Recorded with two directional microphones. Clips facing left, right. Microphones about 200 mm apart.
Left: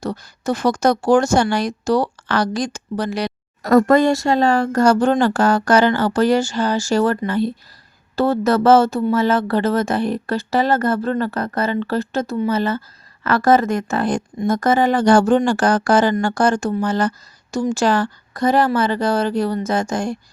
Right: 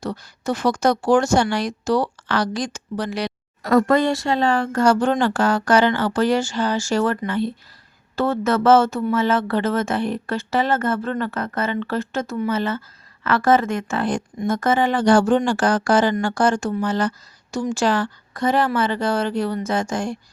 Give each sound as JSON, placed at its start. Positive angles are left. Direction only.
{"t": 0.0, "sound": "speech", "side_deg": 40}